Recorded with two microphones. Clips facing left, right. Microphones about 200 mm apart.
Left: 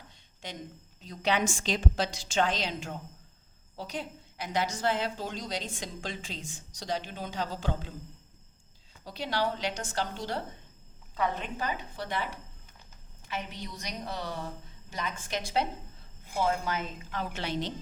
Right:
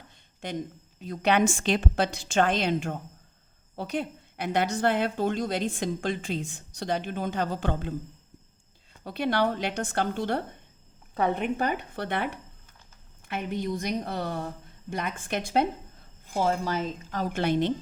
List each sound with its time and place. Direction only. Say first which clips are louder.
0.4 s a woman's voice: right 8 dB; 55° right (ahead or behind)
9.0 s a woman's voice: right 6 dB; 60° right (ahead or behind)
16.2 s a woman's voice: right 3 dB; 40° right (ahead or behind); by 17.7 s 55° right (ahead or behind)